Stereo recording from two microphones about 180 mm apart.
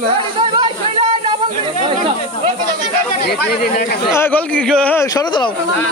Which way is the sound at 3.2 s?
60° left (ahead or behind).